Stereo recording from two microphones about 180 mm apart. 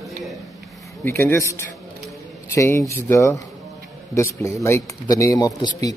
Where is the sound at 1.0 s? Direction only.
15° left (ahead or behind).